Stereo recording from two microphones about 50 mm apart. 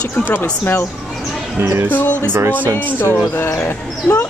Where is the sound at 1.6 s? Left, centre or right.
Right.